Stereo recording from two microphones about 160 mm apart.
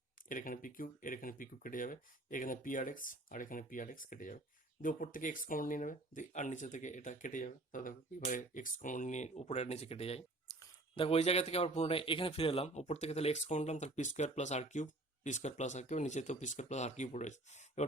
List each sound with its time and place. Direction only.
0.3 s a man's voice: 60° left (ahead or behind); by 10.2 s 40° left (ahead or behind)
10.5 s a sound: 15° left (ahead or behind)
10.9 s a man's voice: 40° left (ahead or behind)